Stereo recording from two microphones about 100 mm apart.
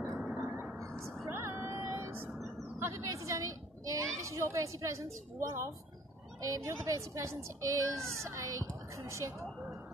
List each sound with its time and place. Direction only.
0.0 s a sound: 5° left (ahead or behind)
0.7 s vehicle: 30° right (ahead or behind)
1.2 s meow: 25° right (ahead or behind)
2.8 s a child's voice: 30° right (ahead or behind)